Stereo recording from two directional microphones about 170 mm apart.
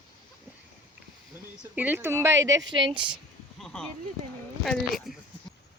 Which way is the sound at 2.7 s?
30° right (ahead or behind).